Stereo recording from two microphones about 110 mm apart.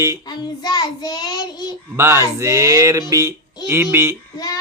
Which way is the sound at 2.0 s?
25° right (ahead or behind).